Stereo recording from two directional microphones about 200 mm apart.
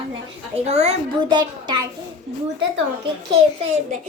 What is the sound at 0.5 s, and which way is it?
A woman's voice, 30° right (ahead or behind).